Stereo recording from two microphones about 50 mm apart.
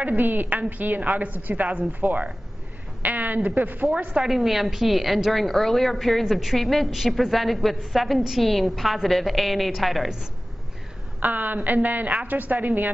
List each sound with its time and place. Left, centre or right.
0.0 s a woman's voice: right
3.0 s a sound: right
3.4 s a woman's voice: right
4.2 s a woman's voice: centre
11.1 s a woman's voice: right